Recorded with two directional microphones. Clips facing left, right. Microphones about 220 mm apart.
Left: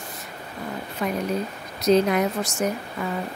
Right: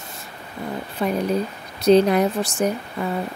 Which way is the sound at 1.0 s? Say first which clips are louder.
Right 4 dB; 30° right (ahead or behind).